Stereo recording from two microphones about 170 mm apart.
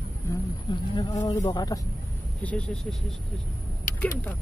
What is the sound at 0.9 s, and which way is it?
Speech, 25° left (ahead or behind).